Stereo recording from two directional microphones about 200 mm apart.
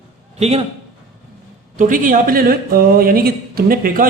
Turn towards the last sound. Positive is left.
turn(degrees=-50)  # may be behind; listen again after turning